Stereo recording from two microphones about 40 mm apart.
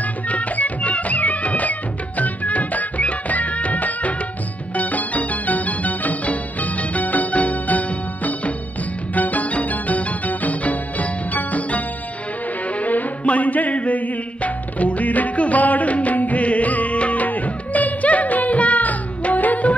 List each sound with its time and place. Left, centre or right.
0.0 s music: left